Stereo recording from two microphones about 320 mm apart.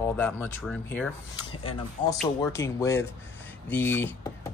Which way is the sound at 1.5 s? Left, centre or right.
Centre.